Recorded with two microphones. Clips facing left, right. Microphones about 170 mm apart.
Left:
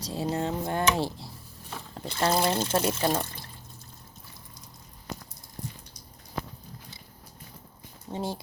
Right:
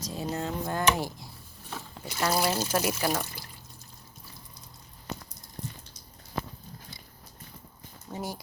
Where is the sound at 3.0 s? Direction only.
25° left (ahead or behind).